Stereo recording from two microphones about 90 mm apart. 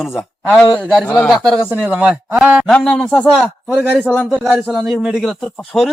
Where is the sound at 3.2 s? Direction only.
Centre (ahead or behind).